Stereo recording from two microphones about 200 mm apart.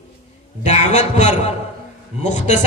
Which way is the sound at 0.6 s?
35° left (ahead or behind).